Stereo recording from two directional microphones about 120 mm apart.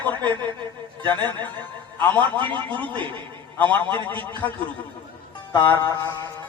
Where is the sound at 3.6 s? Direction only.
15° left (ahead or behind).